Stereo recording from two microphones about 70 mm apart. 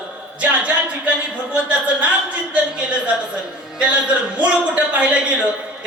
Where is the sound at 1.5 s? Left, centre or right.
Centre.